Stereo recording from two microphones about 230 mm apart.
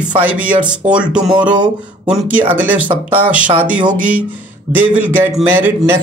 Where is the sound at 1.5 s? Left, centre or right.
Centre.